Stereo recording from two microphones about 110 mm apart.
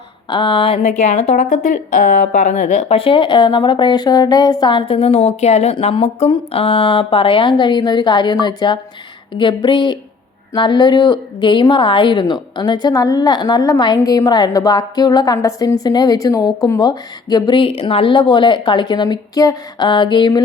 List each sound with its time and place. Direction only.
0.3 s speech: 45° left (ahead or behind)
0.8 s a woman's voice: 90° left
3.0 s speech: 50° left (ahead or behind); by 5.7 s 75° left (ahead or behind)
5.7 s a woman's voice: 55° left (ahead or behind); by 19.9 s 35° left (ahead or behind)
19.9 s speech: 45° left (ahead or behind)